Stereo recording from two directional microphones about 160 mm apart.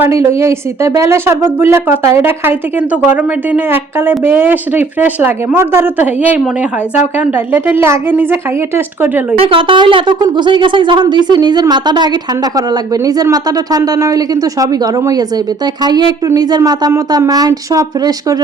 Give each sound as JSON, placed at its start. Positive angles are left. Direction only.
{"t": 0.0, "sound": "a woman's voice", "side_deg": -15}
{"t": 9.4, "sound": "a woman's voice", "side_deg": -35}